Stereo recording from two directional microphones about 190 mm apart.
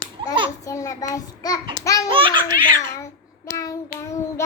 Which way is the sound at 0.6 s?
15° left (ahead or behind).